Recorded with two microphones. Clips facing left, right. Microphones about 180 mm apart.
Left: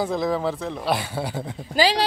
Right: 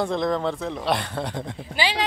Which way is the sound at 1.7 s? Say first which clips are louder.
Left 6 dB; 40° left (ahead or behind).